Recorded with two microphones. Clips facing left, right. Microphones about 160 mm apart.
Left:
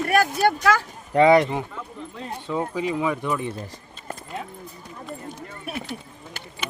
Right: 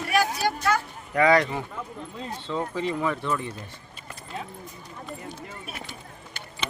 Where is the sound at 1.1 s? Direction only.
25° left (ahead or behind).